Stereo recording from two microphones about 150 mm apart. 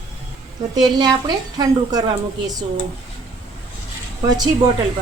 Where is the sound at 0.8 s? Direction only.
30° right (ahead or behind).